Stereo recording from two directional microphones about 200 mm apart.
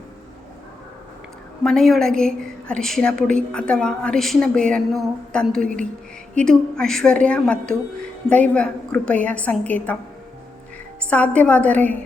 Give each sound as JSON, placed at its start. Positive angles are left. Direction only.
{"t": 1.6, "sound": "a woman's voice", "side_deg": 0}
{"t": 11.0, "sound": "a woman's voice", "side_deg": 5}